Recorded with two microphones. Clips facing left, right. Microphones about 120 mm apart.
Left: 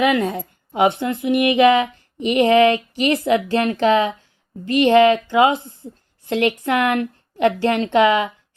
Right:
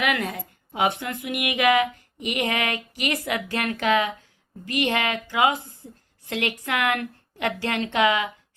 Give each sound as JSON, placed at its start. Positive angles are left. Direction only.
{"t": 0.0, "sound": "a woman's voice", "side_deg": 25}